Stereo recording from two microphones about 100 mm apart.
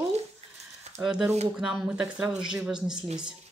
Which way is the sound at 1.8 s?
10° right (ahead or behind).